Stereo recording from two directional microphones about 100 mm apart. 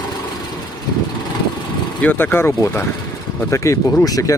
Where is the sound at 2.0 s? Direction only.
20° left (ahead or behind); by 4.3 s 35° left (ahead or behind).